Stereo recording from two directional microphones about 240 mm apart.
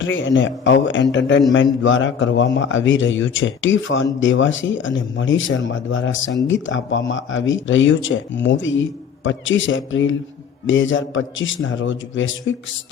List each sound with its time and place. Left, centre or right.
0.0 s a man's voice: left